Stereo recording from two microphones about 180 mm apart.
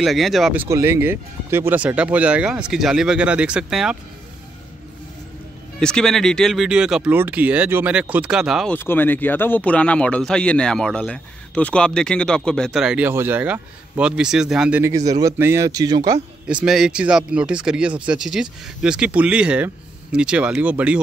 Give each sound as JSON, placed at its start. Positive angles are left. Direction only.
{"t": 0.0, "sound": "speech", "side_deg": 0}
{"t": 5.8, "sound": "speech", "side_deg": 5}
{"t": 8.7, "sound": "speech", "side_deg": 10}
{"t": 16.4, "sound": "speech", "side_deg": -5}